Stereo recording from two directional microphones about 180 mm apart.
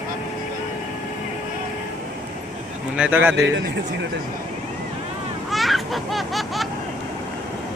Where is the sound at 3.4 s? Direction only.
80° right.